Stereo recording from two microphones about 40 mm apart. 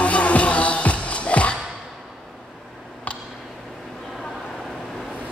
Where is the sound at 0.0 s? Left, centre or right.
Left.